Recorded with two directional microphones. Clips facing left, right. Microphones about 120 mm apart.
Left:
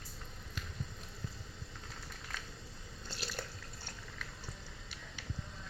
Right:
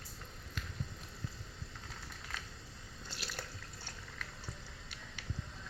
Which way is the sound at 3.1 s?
30° left (ahead or behind).